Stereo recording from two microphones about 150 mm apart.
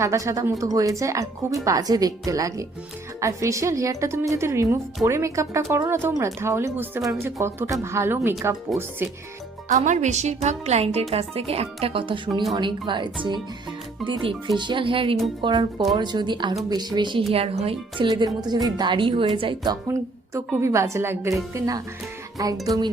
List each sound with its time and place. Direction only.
0.0 s a woman's voice: 20° right (ahead or behind)
9.6 s speech: 50° right (ahead or behind); by 12.3 s 35° right (ahead or behind)
12.3 s speech: centre (ahead or behind)
12.5 s a woman's voice: 30° right (ahead or behind)
20.6 s a woman's voice: 20° right (ahead or behind)